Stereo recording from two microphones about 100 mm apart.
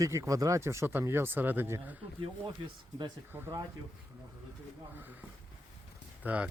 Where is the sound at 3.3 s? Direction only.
20° right (ahead or behind).